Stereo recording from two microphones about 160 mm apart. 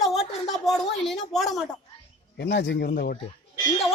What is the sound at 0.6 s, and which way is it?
Speech, centre (ahead or behind).